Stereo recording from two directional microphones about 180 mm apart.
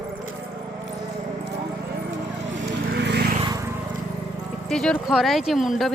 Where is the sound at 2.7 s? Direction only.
70° right (ahead or behind).